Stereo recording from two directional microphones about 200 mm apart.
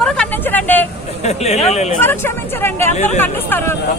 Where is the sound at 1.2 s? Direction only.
35° left (ahead or behind).